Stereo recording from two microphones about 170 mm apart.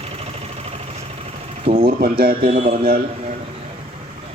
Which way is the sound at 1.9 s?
60° right (ahead or behind).